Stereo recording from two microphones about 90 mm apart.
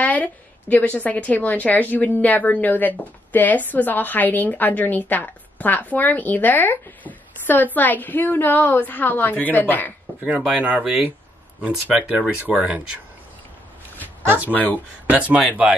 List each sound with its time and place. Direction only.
0.0 s a woman's voice: 20° left (ahead or behind)
10.4 s speech: 15° right (ahead or behind)
14.5 s a woman's voice: 20° left (ahead or behind)
15.0 s speech: 15° right (ahead or behind)